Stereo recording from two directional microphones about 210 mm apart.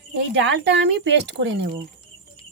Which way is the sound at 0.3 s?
55° right (ahead or behind).